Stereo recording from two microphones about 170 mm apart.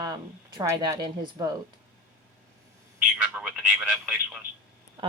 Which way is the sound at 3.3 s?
5° right (ahead or behind).